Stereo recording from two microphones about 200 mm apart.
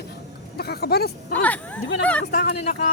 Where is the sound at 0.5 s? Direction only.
50° left (ahead or behind).